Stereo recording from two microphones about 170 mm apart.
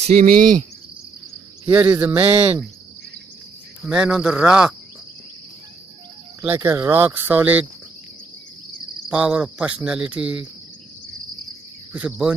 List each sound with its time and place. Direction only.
0.0 s cricket: 55° right (ahead or behind)
1.7 s speech: 10° right (ahead or behind)
3.8 s speech: 5° right (ahead or behind)
6.4 s speech: 15° right (ahead or behind)
9.1 s speech: 5° right (ahead or behind)
11.9 s speech: 5° right (ahead or behind)